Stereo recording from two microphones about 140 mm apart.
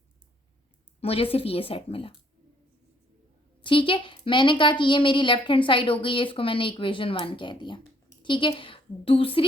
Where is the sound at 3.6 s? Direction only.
40° left (ahead or behind).